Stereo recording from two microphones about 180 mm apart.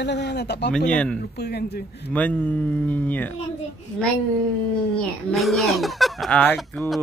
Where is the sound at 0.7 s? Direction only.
5° left (ahead or behind).